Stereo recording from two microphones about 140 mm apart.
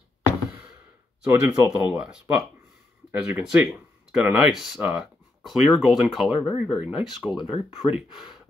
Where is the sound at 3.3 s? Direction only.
10° right (ahead or behind).